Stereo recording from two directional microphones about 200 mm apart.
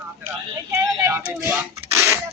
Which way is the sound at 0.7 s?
15° right (ahead or behind).